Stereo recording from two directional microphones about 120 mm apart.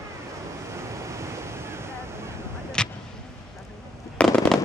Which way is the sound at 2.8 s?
5° left (ahead or behind).